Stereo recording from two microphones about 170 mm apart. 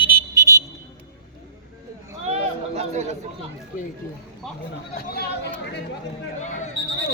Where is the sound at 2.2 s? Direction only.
40° right (ahead or behind).